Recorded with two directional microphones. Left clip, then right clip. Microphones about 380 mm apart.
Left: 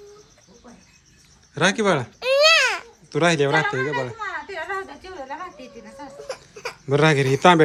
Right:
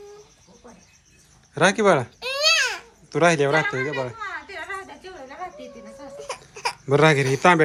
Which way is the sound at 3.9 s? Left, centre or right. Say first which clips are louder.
Left 2 dB; centre.